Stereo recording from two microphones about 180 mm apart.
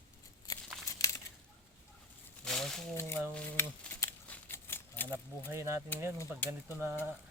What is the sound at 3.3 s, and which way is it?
Livestock, 10° left (ahead or behind).